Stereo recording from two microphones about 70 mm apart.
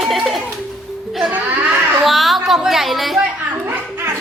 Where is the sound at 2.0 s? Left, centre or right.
Centre.